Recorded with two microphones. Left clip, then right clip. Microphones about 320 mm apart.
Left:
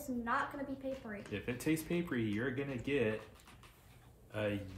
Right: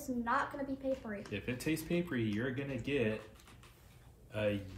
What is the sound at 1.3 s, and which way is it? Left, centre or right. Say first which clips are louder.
Speech: left 1 dB; centre.